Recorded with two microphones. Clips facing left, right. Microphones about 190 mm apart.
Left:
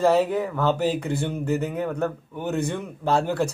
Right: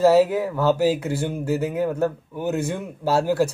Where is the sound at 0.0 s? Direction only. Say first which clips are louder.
Right 4 dB; 5° right (ahead or behind).